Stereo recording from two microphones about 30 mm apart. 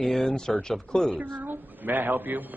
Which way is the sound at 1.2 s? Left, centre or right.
Right.